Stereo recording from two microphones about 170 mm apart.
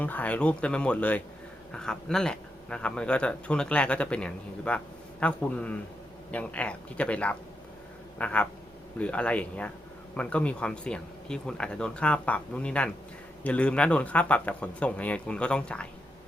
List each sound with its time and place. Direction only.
0.0 s speech: 10° left (ahead or behind)